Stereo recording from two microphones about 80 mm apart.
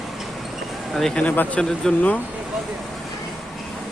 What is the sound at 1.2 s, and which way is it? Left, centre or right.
Speech, left.